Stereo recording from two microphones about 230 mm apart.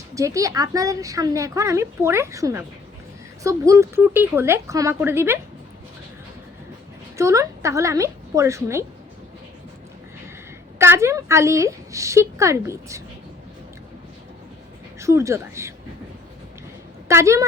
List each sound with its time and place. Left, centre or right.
0.1 s a woman's voice: centre
7.2 s a woman's voice: centre
10.8 s a woman's voice: centre
14.9 s speech: centre
17.1 s a woman's voice: centre